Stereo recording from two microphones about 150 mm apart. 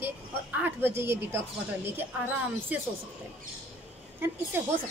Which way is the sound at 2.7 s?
10° right (ahead or behind).